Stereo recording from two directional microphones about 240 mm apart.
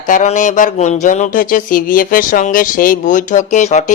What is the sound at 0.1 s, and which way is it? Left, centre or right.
Speech, left.